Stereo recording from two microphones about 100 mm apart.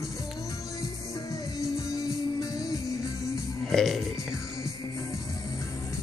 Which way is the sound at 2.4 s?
40° left (ahead or behind).